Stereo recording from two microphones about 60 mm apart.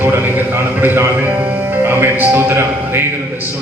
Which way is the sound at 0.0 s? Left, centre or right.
Right.